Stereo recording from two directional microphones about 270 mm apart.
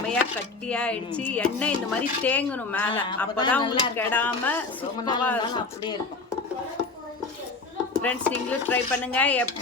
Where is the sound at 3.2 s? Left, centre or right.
Centre.